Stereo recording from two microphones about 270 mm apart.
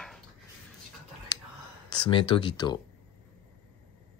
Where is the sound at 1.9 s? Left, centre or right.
Centre.